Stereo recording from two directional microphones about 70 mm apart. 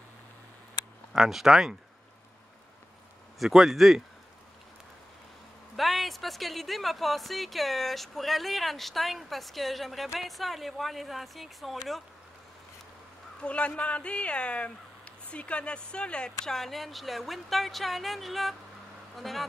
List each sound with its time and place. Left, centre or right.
1.1 s speech: centre
3.3 s speech: centre
5.8 s speech: centre
13.4 s speech: centre